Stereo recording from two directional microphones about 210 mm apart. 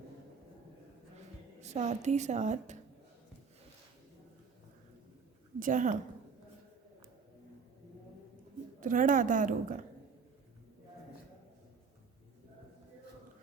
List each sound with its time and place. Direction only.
1.6 s a woman's voice: 35° right (ahead or behind)
5.5 s a woman's voice: 40° right (ahead or behind)
8.8 s a woman's voice: 40° right (ahead or behind)